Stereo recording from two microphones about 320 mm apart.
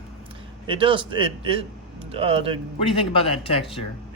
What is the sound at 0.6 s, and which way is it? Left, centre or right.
Speech, centre.